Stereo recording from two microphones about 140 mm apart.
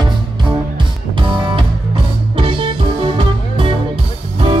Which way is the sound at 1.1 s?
35° right (ahead or behind).